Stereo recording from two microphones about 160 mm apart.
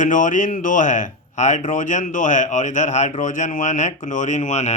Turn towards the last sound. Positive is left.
turn(degrees=45)  # may be behind; listen again after turning